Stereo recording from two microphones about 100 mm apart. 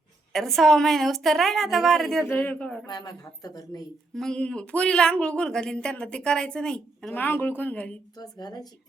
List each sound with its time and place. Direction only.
0.3 s a woman's voice: 5° left (ahead or behind)
2.2 s speech: 20° left (ahead or behind)
2.8 s speech: 45° left (ahead or behind)
4.1 s speech: 5° left (ahead or behind)
7.2 s speech: 20° left (ahead or behind)
8.1 s speech: 40° left (ahead or behind)